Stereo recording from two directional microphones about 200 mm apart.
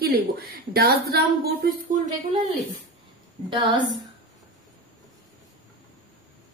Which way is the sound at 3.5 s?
25° right (ahead or behind).